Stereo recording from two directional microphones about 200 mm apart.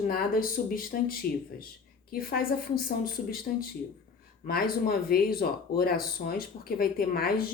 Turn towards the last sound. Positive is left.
turn(degrees=50)  # may be behind; listen again after turning